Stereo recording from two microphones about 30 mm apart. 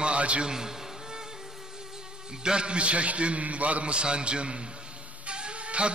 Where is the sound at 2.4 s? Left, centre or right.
Right.